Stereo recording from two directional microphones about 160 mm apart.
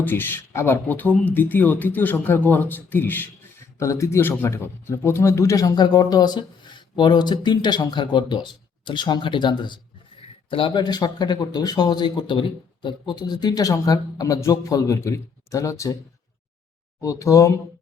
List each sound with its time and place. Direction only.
0.0 s a man's voice: 15° left (ahead or behind)
17.0 s a man's voice: 20° left (ahead or behind)